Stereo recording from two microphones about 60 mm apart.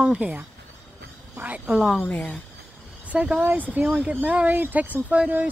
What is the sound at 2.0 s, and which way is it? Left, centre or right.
Speech, left.